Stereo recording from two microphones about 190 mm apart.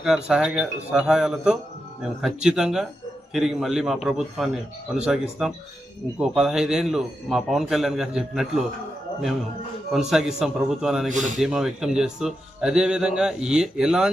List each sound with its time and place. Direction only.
0.0 s speech: 5° right (ahead or behind)
10.1 s speech: centre (ahead or behind)
11.1 s speech: 40° right (ahead or behind)
11.3 s speech: 5° right (ahead or behind)